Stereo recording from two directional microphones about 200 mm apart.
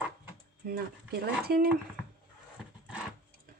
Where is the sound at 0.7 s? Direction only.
50° right (ahead or behind).